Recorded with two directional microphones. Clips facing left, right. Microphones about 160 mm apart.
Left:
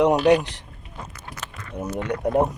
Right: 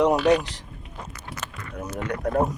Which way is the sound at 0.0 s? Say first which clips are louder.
Left 2 dB; 15° left (ahead or behind).